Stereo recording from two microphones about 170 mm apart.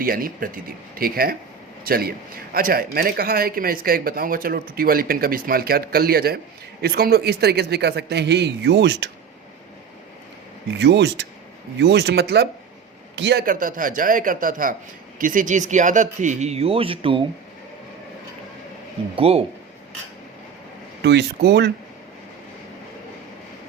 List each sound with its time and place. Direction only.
0.0 s a man's voice: 55° right (ahead or behind); by 9.0 s 90° right
10.8 s speech: 85° right
13.1 s a man's voice: 90° right
13.4 s speech: 50° right (ahead or behind); by 17.2 s 30° right (ahead or behind)
19.1 s speech: 35° right (ahead or behind)
21.0 s speech: 80° right